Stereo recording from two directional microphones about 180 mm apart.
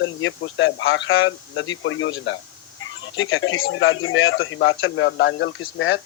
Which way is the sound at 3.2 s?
90° left.